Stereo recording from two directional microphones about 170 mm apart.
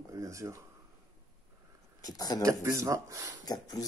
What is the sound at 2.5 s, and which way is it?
Speech, 20° right (ahead or behind).